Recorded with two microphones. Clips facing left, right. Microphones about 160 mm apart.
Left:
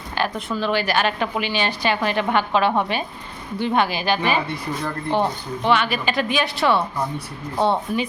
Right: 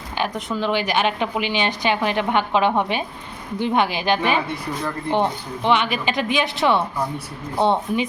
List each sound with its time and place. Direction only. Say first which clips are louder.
0.2 s a woman's voice: even; 20° right (ahead or behind)
5.6 s a woman's voice: even; 20° right (ahead or behind)